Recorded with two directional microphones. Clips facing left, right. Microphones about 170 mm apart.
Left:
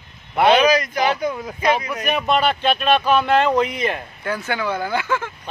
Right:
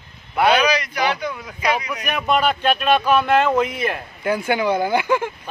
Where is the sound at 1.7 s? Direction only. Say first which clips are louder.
Left 1 dB; 30° left (ahead or behind).